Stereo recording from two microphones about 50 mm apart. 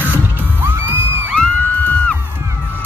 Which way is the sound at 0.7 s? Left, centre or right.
Right.